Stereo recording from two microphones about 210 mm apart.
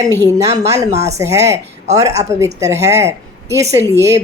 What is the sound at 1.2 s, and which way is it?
A woman's voice, 15° right (ahead or behind).